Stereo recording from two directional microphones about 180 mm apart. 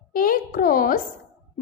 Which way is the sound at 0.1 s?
50° left (ahead or behind).